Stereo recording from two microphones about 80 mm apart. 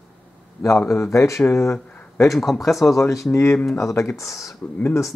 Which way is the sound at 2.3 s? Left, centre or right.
Centre.